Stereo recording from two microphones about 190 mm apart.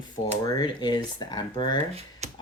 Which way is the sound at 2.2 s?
35° right (ahead or behind).